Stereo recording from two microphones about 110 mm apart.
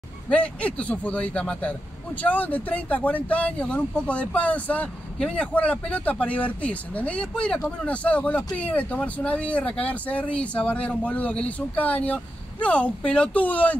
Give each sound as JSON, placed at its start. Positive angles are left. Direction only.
{"t": 0.3, "sound": "speech", "side_deg": 10}